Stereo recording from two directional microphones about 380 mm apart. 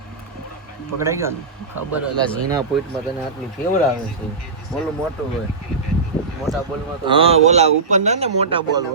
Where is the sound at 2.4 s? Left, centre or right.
Centre.